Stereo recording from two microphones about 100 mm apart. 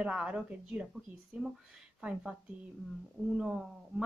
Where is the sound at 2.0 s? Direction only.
10° right (ahead or behind).